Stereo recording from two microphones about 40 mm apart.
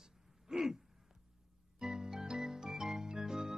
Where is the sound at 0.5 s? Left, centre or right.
Centre.